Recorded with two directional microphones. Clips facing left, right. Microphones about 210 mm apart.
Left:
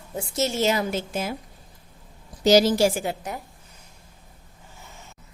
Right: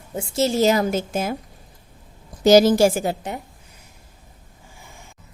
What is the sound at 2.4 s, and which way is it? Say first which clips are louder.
Speech: right 4 dB; 50° right (ahead or behind).